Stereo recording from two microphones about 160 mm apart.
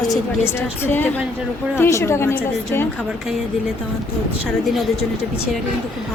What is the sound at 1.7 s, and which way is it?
Speech, 15° left (ahead or behind).